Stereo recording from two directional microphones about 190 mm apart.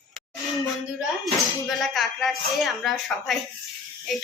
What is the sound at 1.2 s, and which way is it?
Speech, centre (ahead or behind).